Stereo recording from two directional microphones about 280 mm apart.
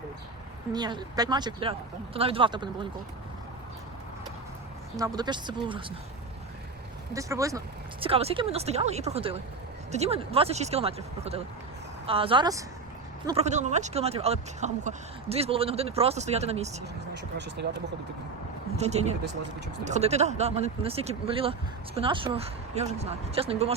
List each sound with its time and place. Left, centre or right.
0.7 s speech: centre
4.9 s speech: centre
7.1 s speech: centre
17.6 s speech: right
18.8 s speech: right